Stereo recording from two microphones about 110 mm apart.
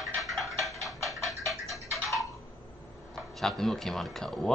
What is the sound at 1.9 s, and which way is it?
Tick-tock, centre (ahead or behind).